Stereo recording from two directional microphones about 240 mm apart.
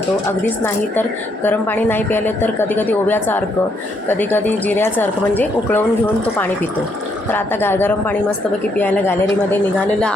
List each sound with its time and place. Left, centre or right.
0.4 s a woman's voice: centre
7.3 s a woman's voice: centre